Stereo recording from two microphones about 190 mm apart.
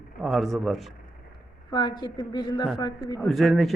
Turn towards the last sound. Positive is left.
turn(degrees=0)  # may be behind; listen again after turning